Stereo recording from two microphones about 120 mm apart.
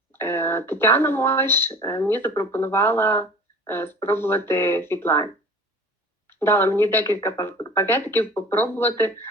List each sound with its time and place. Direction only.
0.1 s speech: 20° left (ahead or behind)